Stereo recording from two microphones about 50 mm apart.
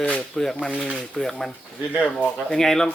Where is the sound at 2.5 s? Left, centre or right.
Centre.